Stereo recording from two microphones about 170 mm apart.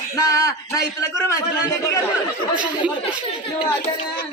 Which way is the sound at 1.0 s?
15° left (ahead or behind).